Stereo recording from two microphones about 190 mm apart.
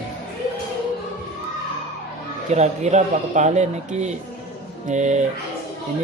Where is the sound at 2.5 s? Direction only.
35° right (ahead or behind).